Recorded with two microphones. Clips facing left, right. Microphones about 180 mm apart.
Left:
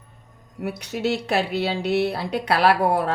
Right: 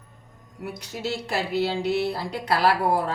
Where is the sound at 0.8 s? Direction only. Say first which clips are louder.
Left 6 dB; 65° left (ahead or behind).